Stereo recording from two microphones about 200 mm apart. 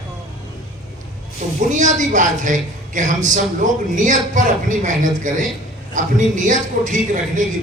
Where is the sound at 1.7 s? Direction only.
40° right (ahead or behind).